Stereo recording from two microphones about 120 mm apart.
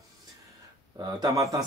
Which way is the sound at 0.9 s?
35° right (ahead or behind).